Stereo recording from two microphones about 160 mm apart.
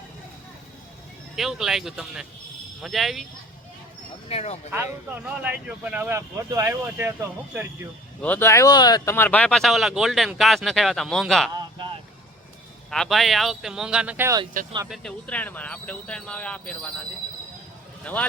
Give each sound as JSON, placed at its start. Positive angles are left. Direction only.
{"t": 1.4, "sound": "speech", "side_deg": 0}
{"t": 4.3, "sound": "speech", "side_deg": 40}
{"t": 4.7, "sound": "speech", "side_deg": -15}
{"t": 8.2, "sound": "speech", "side_deg": 10}
{"t": 9.1, "sound": "speech", "side_deg": 10}
{"t": 12.9, "sound": "speech", "side_deg": 0}
{"t": 14.8, "sound": "speech", "side_deg": 0}
{"t": 18.0, "sound": "speech", "side_deg": 10}